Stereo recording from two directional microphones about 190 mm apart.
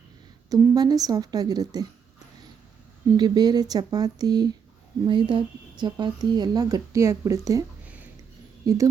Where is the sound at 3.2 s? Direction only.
20° right (ahead or behind).